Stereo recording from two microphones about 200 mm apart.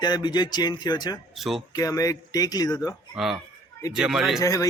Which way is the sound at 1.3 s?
Centre (ahead or behind).